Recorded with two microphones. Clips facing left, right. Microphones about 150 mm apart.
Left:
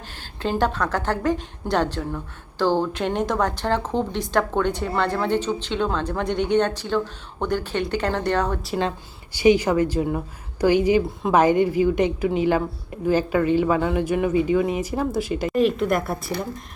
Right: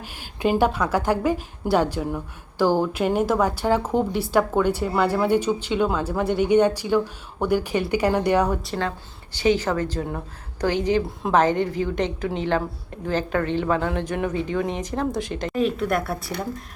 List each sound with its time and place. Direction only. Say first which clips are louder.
0.0 s a woman's voice: right 4 dB; 10° right (ahead or behind)
9.3 s speech: left 4 dB; 10° left (ahead or behind)
11.0 s a woman's voice: left 2 dB; centre (ahead or behind)
11.3 s speech: left 3 dB; 10° left (ahead or behind)